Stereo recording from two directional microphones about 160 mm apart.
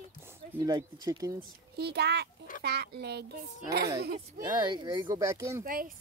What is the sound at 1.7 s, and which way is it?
A child's voice, 90° right.